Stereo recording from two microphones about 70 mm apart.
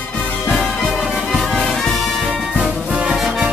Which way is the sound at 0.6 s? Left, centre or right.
Centre.